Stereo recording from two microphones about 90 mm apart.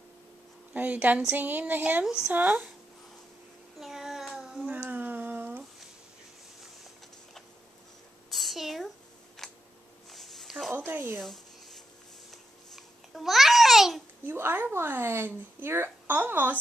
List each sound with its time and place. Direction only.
0.7 s a woman's voice: 15° right (ahead or behind)
2.0 s a woman's voice: 10° right (ahead or behind)
2.3 s speech: 20° right (ahead or behind)
3.8 s child singing: 5° right (ahead or behind)
4.6 s a sound: 20° right (ahead or behind)
8.3 s a sound: centre (ahead or behind)
10.7 s speech: 25° right (ahead or behind)
11.1 s writing: centre (ahead or behind)
12.3 s babbling: centre (ahead or behind)
14.2 s speech: 25° right (ahead or behind)